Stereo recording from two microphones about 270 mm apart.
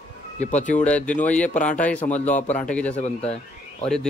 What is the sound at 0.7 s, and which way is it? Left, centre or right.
Speech, centre.